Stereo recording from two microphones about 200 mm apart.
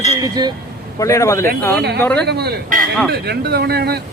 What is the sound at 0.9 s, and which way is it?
Speech, 15° left (ahead or behind).